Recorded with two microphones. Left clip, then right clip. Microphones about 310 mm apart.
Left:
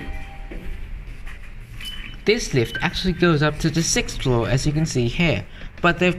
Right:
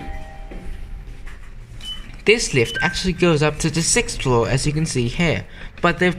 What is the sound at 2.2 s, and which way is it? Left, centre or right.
Speech, centre.